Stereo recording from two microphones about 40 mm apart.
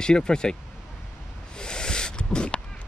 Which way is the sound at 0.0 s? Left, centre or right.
Centre.